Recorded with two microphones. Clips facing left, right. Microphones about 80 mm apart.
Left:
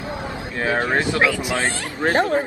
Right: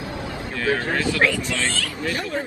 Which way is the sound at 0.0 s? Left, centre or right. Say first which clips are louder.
Left 2 dB; left.